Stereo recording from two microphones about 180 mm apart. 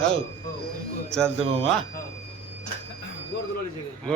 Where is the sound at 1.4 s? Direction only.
30° right (ahead or behind).